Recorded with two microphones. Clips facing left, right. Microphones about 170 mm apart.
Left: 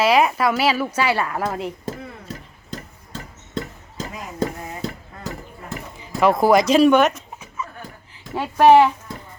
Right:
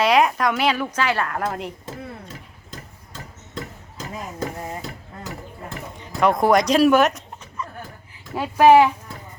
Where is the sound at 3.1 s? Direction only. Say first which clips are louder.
Left 5 dB; 30° left (ahead or behind).